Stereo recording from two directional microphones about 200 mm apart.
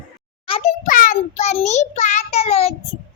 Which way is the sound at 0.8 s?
45° left (ahead or behind).